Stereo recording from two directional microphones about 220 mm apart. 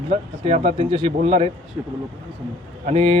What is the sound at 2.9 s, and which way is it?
Speech, 25° right (ahead or behind).